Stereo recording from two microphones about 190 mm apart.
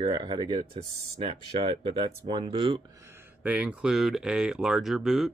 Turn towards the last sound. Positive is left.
turn(degrees=0)  # may be behind; listen again after turning